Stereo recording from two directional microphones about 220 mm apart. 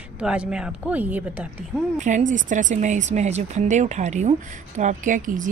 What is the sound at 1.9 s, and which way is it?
Speech, 35° right (ahead or behind).